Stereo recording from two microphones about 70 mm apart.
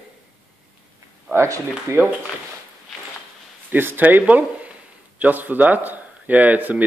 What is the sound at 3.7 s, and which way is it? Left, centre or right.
Speech, right.